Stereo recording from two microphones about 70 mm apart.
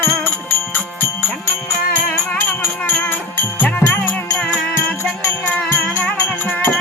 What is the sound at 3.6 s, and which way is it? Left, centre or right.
Music, left.